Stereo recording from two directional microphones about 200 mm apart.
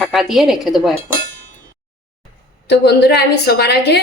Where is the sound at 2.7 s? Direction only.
55° left (ahead or behind).